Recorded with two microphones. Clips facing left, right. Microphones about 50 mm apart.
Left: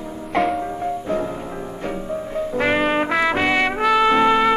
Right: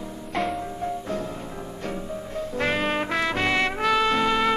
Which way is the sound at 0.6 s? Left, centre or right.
Left.